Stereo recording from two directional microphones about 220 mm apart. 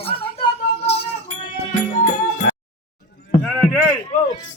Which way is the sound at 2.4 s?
55° left (ahead or behind).